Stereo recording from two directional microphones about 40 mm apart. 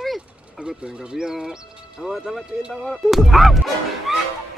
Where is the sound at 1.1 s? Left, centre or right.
Centre.